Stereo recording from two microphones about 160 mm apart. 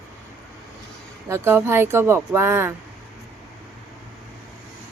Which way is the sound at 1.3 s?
15° right (ahead or behind).